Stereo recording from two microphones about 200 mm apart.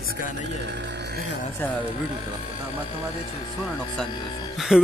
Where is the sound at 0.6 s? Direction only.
60° right (ahead or behind).